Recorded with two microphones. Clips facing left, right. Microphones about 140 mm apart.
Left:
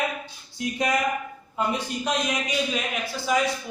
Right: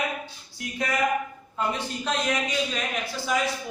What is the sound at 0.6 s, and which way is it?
A man's voice, 15° left (ahead or behind).